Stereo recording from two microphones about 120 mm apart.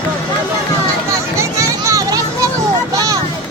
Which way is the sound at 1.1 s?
25° right (ahead or behind).